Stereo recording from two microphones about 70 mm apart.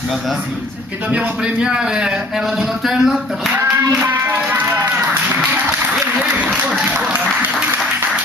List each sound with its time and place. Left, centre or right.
1.1 s speech: centre
3.5 s a sound: right
6.8 s applause: centre